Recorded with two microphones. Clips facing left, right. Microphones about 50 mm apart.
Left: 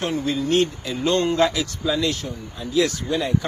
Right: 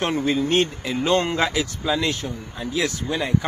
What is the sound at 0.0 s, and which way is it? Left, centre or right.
Speech, right.